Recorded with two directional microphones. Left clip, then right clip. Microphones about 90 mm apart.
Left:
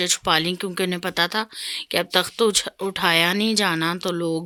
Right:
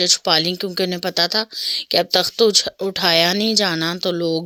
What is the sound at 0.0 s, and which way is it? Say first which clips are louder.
Speech: right 4 dB; 25° right (ahead or behind).